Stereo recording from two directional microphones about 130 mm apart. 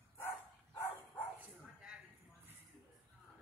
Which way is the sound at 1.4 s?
5° right (ahead or behind).